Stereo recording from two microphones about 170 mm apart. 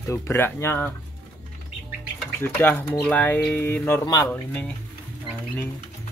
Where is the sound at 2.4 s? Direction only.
10° left (ahead or behind).